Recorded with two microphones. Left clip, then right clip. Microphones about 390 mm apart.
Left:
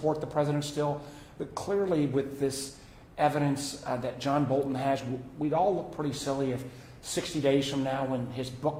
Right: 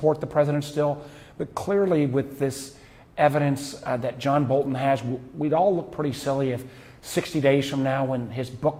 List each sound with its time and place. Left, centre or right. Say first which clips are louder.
0.0 s a man's voice: right 7 dB; right